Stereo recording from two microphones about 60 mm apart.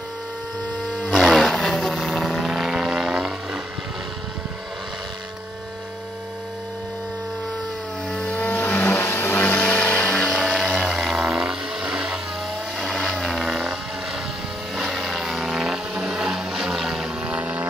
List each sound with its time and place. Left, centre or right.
0.9 s vehicle: centre
8.2 s vehicle: left
10.4 s vehicle: centre
12.7 s vehicle: centre
14.8 s a sound: centre
17.3 s vehicle: right